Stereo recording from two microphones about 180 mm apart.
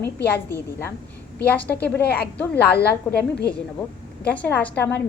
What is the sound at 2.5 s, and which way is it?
Speech, 65° left (ahead or behind).